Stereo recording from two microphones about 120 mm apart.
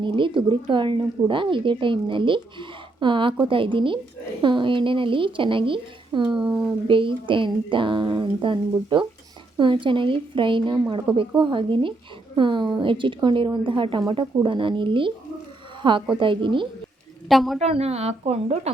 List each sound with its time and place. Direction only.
0.0 s a woman's voice: 45° right (ahead or behind)
6.4 s speech: 10° right (ahead or behind)
6.8 s a woman's voice: 45° right (ahead or behind)
11.1 s speech: 10° right (ahead or behind)
11.5 s a woman's voice: 45° right (ahead or behind)
17.2 s a woman's voice: centre (ahead or behind)
17.6 s speech: 60° right (ahead or behind)